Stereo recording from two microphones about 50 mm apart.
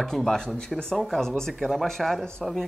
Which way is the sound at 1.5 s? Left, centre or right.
Centre.